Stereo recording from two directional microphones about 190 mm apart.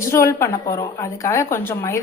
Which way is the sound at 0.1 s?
15° left (ahead or behind).